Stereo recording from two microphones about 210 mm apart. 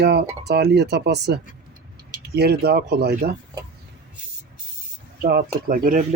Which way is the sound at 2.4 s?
50° right (ahead or behind).